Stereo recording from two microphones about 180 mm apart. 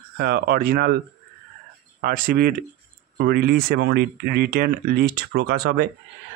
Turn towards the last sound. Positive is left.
turn(degrees=-65)  # may be behind; listen again after turning